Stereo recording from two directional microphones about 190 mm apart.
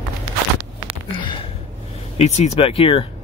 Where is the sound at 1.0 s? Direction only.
25° left (ahead or behind).